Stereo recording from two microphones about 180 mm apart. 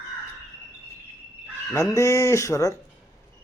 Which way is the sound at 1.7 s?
15° left (ahead or behind).